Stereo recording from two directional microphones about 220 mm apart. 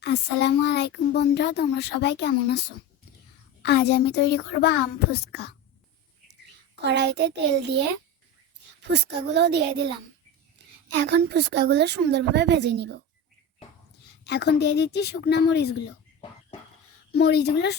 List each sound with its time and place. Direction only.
0.0 s a child's voice: 50° left (ahead or behind)
6.8 s a woman's voice: 50° right (ahead or behind)
8.8 s a woman's voice: 50° right (ahead or behind)
14.3 s a child's voice: 50° left (ahead or behind)
17.1 s a child's voice: 50° left (ahead or behind)